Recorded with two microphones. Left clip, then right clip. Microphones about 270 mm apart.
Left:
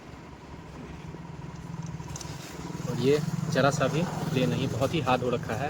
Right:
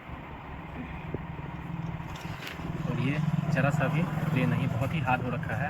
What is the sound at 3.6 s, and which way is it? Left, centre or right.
Speech, centre.